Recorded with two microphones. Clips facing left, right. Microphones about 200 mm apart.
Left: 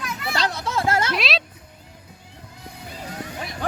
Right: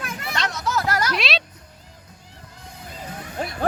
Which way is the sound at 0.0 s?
50° right (ahead or behind).